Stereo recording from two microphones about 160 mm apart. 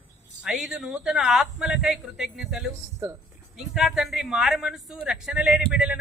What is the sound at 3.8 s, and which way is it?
A man's voice, centre (ahead or behind).